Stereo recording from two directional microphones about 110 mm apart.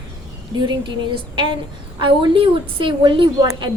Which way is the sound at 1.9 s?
50° right (ahead or behind).